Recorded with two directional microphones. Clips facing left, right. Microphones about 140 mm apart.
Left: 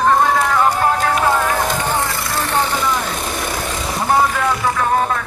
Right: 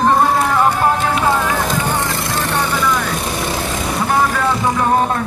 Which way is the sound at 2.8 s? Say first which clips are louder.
Right 2 dB; 25° left (ahead or behind).